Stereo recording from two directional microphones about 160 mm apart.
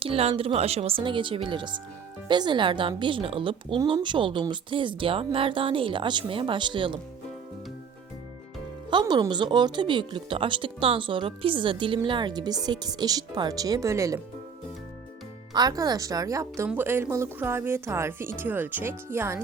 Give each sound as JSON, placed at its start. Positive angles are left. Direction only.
{"t": 0.0, "sound": "speech", "side_deg": -35}
{"t": 8.9, "sound": "speech", "side_deg": -30}
{"t": 15.5, "sound": "a woman's voice", "side_deg": -25}